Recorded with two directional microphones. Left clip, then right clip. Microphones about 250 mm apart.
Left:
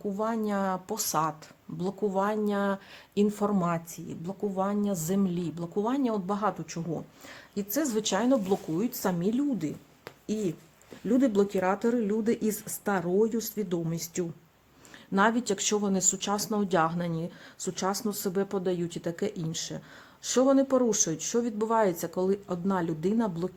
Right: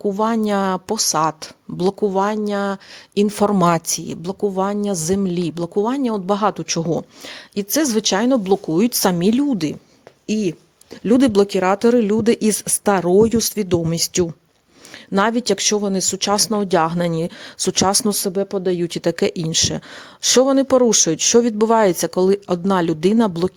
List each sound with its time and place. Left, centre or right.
0.1 s speech: right